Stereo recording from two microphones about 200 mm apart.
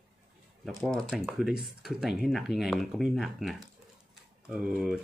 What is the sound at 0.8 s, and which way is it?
Speech, centre (ahead or behind).